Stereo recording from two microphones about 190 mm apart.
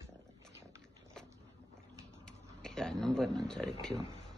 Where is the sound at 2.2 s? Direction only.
5° left (ahead or behind).